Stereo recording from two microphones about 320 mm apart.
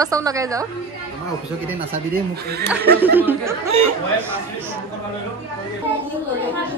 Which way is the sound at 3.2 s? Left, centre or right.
Centre.